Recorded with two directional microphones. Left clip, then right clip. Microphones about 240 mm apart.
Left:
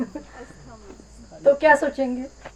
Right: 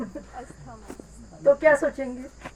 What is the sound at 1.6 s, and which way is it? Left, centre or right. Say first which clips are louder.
Speech: left 3 dB; left.